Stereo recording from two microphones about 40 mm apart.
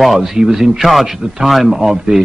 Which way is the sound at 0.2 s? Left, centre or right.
Centre.